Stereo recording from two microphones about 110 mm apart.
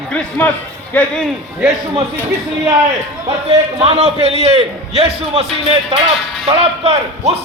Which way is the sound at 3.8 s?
60° right (ahead or behind).